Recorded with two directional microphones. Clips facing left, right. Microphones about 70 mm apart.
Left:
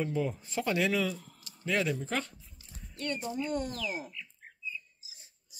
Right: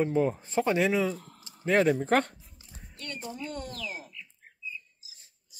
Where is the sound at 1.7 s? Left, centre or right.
Right.